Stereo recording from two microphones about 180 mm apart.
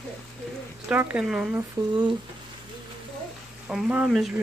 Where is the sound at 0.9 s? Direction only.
10° right (ahead or behind).